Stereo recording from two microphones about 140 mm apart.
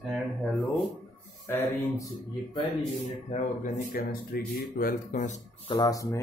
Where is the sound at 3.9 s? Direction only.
90° left; by 5.4 s 70° left (ahead or behind).